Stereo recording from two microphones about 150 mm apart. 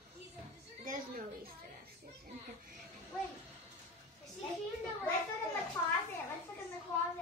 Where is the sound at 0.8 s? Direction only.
70° right (ahead or behind).